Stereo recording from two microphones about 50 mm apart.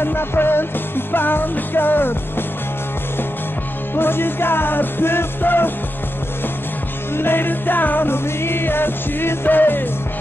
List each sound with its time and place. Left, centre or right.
0.0 s music: left
3.9 s music: left
7.2 s music: left